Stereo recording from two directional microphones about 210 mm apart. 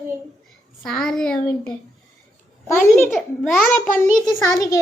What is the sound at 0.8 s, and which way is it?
Speech, centre (ahead or behind).